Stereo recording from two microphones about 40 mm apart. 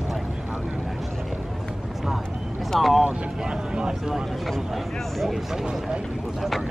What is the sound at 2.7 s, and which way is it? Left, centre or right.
Speech, centre.